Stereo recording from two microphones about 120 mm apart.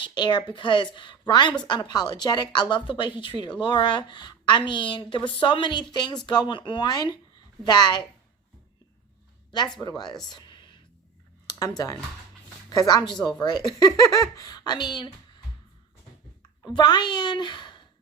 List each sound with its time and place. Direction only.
0.0 s a woman's voice: 40° left (ahead or behind)
9.8 s a woman's voice: 35° left (ahead or behind)
10.2 s a sound: 40° left (ahead or behind)
11.8 s a woman's voice: 35° left (ahead or behind)
16.6 s a woman's voice: 35° left (ahead or behind)